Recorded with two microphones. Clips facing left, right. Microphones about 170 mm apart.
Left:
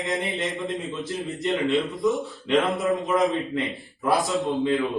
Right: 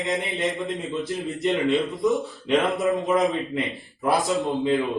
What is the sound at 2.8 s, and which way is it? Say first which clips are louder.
Speech: right 1 dB; centre (ahead or behind).